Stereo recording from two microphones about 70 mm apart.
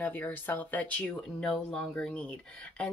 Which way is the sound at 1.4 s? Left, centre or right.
Centre.